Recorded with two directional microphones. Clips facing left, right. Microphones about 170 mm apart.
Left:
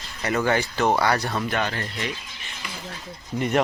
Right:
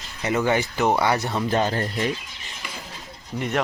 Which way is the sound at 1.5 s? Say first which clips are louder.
Right 4 dB; 35° right (ahead or behind).